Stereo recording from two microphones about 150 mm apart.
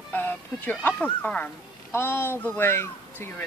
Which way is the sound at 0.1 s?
10° left (ahead or behind).